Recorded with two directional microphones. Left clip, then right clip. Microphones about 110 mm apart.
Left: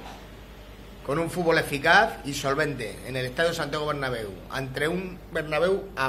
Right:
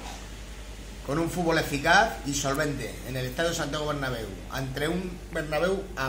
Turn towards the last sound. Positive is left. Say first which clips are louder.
# left 3 dB
turn(degrees=25)  # may be behind; listen again after turning